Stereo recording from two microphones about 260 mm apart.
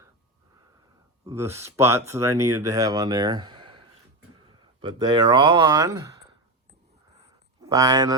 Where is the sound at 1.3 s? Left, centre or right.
Centre.